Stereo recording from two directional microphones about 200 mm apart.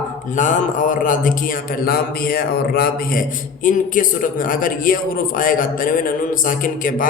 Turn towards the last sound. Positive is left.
turn(degrees=45)  # may be behind; listen again after turning